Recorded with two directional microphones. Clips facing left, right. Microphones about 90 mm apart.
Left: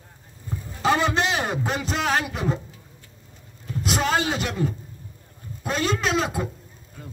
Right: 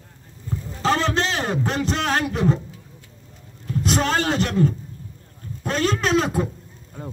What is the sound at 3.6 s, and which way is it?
A man's voice, 5° left (ahead or behind).